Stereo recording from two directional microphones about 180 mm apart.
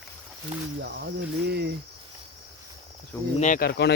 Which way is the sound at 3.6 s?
65° left (ahead or behind).